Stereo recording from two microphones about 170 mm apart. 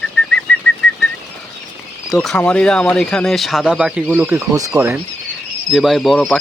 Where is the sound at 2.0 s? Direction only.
Centre (ahead or behind).